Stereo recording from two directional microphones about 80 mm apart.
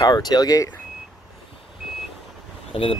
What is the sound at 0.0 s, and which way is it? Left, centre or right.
Speech, left.